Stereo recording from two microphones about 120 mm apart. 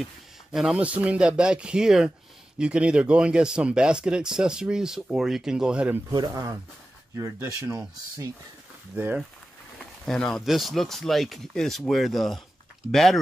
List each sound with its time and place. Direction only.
0.0 s speech: 5° right (ahead or behind)
6.1 s speech: 35° right (ahead or behind)
7.2 s speech: 20° right (ahead or behind)
8.9 s speech: 15° right (ahead or behind)
10.0 s speech: 5° left (ahead or behind)